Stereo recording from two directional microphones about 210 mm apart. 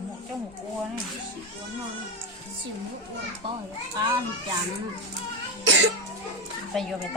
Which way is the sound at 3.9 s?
20° right (ahead or behind).